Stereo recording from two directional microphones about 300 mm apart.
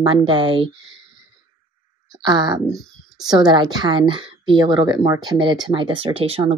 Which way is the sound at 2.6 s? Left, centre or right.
Centre.